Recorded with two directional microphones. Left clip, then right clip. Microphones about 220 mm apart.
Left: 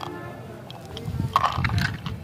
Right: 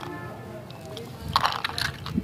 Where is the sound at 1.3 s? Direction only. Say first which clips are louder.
Left 2 dB; 5° right (ahead or behind).